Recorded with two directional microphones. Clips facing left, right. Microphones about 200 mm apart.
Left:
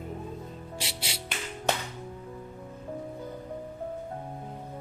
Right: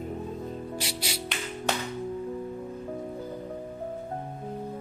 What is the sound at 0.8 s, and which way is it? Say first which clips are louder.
Speech: right 4 dB; 25° left (ahead or behind).